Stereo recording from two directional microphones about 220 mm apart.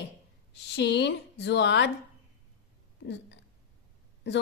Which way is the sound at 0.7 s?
50° left (ahead or behind).